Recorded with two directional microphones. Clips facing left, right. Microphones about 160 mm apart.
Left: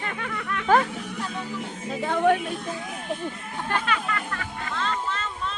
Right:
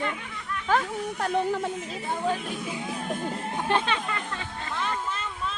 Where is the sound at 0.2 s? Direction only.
85° left.